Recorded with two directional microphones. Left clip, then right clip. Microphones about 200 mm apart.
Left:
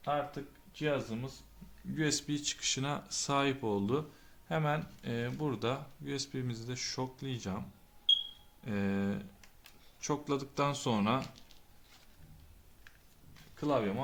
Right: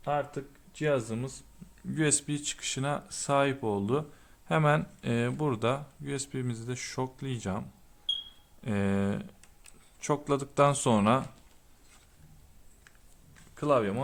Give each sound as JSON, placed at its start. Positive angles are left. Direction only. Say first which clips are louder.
{"t": 0.1, "sound": "speech", "louder": "right 4 dB", "side_deg": -55}
{"t": 2.0, "sound": "speech", "louder": "right 4 dB", "side_deg": -40}
{"t": 4.4, "sound": "speech", "louder": "right 8 dB", "side_deg": -45}
{"t": 8.6, "sound": "speech", "louder": "right 5 dB", "side_deg": -35}
{"t": 13.6, "sound": "speech", "louder": "right 6 dB", "side_deg": -50}